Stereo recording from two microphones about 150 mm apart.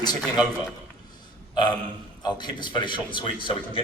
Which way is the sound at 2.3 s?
30° left (ahead or behind).